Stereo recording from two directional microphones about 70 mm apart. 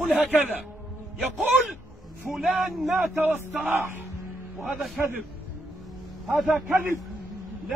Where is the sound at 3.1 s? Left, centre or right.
Right.